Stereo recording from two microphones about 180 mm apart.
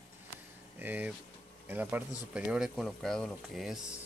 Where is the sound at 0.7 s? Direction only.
10° right (ahead or behind).